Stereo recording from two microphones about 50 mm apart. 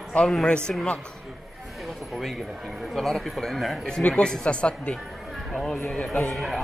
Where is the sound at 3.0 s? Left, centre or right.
Centre.